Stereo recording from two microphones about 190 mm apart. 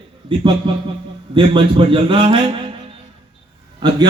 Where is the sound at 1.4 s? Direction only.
25° right (ahead or behind).